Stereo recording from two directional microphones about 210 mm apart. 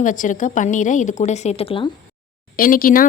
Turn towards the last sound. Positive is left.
turn(degrees=40)  # may be behind; listen again after turning